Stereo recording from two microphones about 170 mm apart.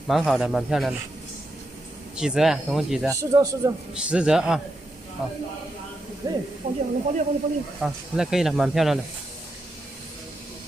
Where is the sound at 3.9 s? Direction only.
5° right (ahead or behind).